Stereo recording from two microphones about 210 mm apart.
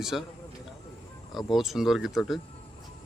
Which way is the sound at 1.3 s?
Centre (ahead or behind).